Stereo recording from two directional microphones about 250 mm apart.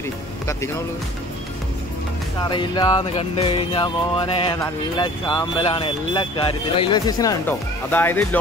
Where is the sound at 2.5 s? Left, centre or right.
Centre.